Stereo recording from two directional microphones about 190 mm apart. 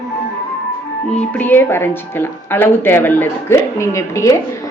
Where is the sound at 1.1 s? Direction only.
10° left (ahead or behind).